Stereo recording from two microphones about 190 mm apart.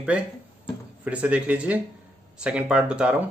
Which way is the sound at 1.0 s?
5° right (ahead or behind).